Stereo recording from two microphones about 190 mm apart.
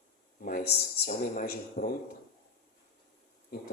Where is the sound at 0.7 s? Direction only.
40° left (ahead or behind).